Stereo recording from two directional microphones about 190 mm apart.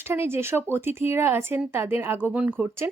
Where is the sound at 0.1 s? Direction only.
15° right (ahead or behind).